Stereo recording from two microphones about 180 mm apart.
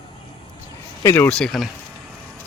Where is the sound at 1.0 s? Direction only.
15° left (ahead or behind).